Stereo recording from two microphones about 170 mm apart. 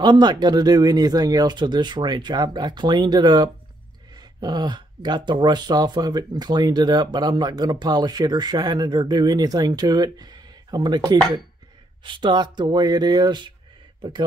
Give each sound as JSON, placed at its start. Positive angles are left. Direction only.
{"t": 0.0, "sound": "speech", "side_deg": -25}